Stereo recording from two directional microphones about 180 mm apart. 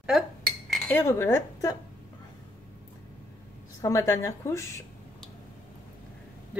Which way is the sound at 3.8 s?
15° left (ahead or behind).